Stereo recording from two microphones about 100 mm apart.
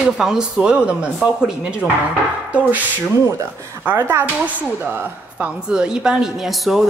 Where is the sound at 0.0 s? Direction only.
5° right (ahead or behind).